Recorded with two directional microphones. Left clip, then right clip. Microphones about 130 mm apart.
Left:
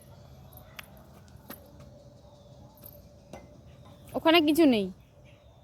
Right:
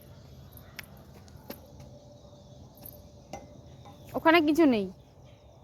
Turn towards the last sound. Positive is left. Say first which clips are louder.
# left 1 dB
turn(degrees=15)  # may be behind; listen again after turning